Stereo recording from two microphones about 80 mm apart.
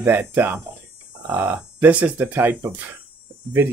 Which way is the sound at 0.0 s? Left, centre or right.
Right.